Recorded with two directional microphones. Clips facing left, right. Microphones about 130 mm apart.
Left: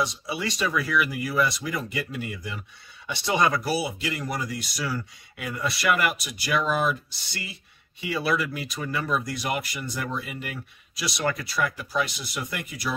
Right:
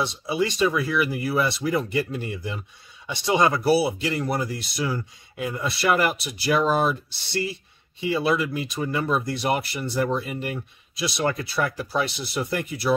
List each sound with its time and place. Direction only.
0.0 s speech: 25° right (ahead or behind)
3.4 s speech: 30° right (ahead or behind)